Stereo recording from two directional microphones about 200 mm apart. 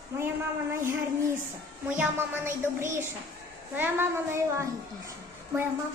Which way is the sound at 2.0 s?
10° right (ahead or behind).